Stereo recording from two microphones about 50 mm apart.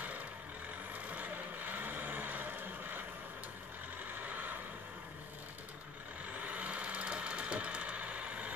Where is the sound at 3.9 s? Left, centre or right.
Right.